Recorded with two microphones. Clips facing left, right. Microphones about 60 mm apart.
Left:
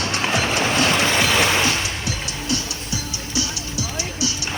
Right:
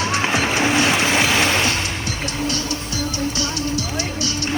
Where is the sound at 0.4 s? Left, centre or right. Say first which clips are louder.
Right 2 dB; centre.